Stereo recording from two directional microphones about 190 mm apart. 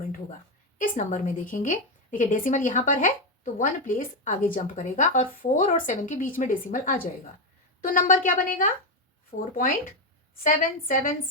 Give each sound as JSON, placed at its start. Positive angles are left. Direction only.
{"t": 0.8, "sound": "a woman's voice", "side_deg": 40}